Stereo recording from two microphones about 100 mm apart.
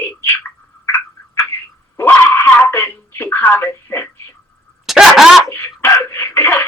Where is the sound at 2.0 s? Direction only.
25° left (ahead or behind).